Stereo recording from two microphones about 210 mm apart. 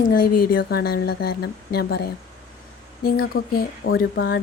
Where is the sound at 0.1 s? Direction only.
45° left (ahead or behind).